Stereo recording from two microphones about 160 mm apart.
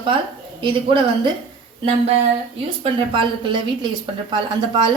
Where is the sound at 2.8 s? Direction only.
30° right (ahead or behind).